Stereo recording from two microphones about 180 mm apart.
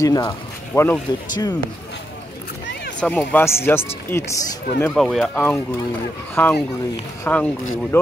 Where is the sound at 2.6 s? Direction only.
80° left.